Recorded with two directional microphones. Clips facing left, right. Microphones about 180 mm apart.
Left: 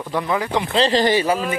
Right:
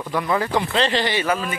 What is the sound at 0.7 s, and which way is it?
Speech, 40° left (ahead or behind).